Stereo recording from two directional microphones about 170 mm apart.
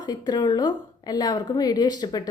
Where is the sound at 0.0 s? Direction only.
25° left (ahead or behind).